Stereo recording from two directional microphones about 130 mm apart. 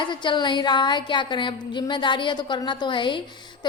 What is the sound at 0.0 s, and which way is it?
A woman's voice, 35° left (ahead or behind).